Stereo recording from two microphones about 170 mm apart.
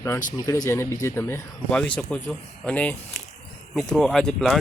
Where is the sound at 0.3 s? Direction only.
20° left (ahead or behind).